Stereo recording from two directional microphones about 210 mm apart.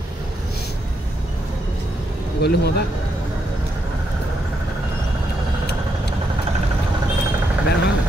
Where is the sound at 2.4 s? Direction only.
50° left (ahead or behind).